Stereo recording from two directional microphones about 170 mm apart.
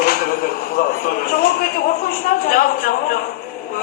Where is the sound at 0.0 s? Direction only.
60° left (ahead or behind).